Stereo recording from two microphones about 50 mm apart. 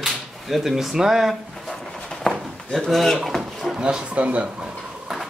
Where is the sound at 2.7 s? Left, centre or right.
Centre.